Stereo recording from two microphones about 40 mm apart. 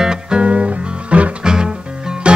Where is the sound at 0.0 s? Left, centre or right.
Right.